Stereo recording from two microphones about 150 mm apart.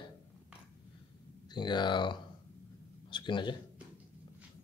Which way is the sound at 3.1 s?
35° left (ahead or behind).